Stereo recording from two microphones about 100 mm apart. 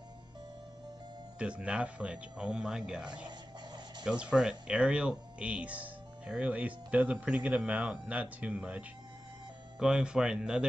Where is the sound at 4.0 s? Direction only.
10° right (ahead or behind).